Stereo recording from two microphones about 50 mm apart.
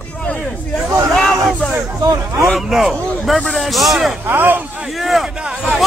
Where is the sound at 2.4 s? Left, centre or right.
Centre.